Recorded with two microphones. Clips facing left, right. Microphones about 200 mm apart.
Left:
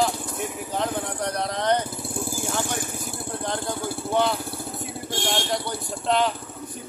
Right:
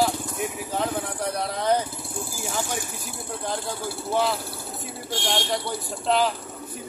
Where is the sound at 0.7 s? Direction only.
Centre (ahead or behind).